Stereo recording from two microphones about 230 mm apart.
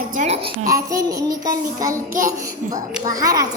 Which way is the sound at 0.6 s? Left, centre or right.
Centre.